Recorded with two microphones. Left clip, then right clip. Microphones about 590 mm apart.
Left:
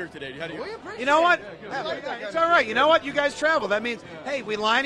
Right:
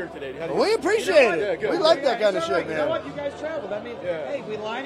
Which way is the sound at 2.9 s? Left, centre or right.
Left.